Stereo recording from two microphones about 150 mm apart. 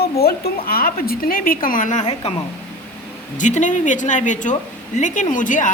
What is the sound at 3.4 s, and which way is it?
A woman's voice, 55° left (ahead or behind).